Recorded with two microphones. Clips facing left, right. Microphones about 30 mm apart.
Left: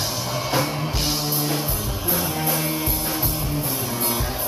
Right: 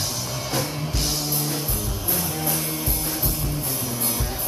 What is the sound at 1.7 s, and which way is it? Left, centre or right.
Music, centre.